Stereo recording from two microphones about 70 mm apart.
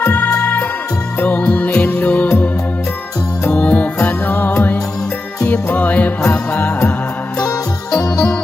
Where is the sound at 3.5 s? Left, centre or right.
Centre.